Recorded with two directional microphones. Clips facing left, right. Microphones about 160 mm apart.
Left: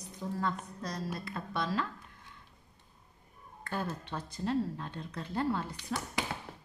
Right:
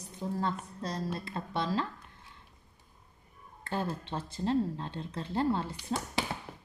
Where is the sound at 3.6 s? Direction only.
25° right (ahead or behind).